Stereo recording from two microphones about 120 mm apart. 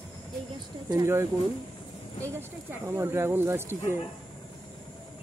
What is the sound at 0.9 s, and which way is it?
Speech, 25° right (ahead or behind).